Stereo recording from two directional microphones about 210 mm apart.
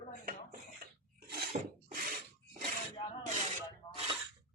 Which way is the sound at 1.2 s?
45° right (ahead or behind).